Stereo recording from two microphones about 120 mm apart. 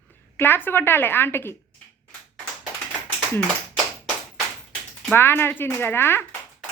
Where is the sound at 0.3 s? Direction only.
15° left (ahead or behind).